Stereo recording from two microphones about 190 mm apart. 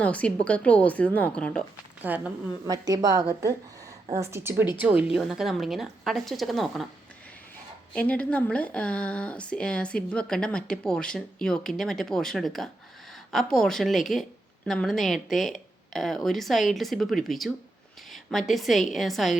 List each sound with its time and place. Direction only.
0.0 s a woman's voice: 5° left (ahead or behind)
2.0 s speech: 10° right (ahead or behind)
2.6 s a woman's voice: 20° right (ahead or behind); by 6.8 s centre (ahead or behind)
7.9 s speech: 5° left (ahead or behind)